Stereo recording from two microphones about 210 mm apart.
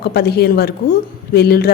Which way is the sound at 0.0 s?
50° left (ahead or behind).